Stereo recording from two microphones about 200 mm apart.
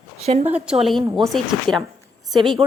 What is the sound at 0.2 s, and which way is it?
Speech, 30° right (ahead or behind).